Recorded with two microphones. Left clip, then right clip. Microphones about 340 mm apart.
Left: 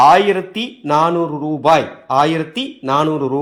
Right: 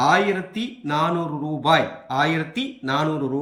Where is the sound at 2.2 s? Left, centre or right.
Left.